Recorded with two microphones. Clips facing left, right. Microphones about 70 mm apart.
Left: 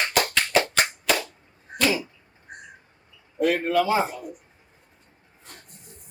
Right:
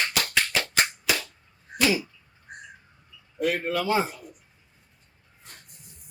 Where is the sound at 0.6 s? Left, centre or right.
Left.